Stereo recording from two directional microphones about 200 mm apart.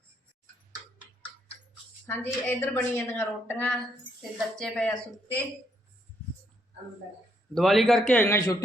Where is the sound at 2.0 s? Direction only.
10° left (ahead or behind).